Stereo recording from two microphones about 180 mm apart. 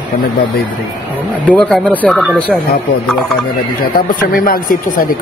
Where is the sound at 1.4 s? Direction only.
5° left (ahead or behind).